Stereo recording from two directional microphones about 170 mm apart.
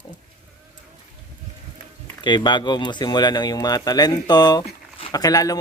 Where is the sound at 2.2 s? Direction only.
25° left (ahead or behind).